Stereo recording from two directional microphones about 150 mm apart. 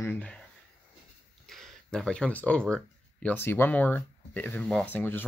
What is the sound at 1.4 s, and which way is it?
Speech, centre (ahead or behind).